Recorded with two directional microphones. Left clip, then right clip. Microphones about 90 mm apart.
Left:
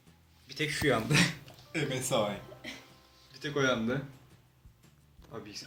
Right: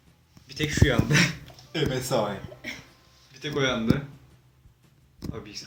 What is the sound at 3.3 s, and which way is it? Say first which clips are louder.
Speech: right 4 dB; 25° left (ahead or behind).